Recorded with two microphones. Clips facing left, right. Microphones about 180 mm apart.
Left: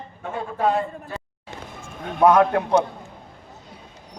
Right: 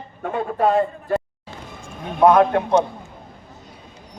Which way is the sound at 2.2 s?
25° right (ahead or behind).